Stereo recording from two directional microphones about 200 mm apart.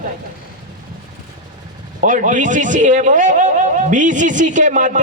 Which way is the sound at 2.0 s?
40° right (ahead or behind).